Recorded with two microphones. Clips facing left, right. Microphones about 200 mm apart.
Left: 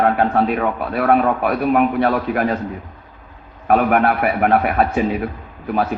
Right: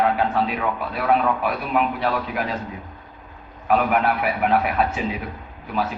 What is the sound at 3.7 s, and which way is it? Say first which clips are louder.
A man's voice: left 4 dB; 50° left (ahead or behind).